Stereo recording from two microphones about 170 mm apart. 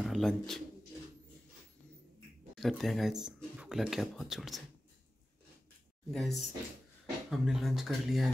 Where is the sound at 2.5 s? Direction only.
Centre (ahead or behind).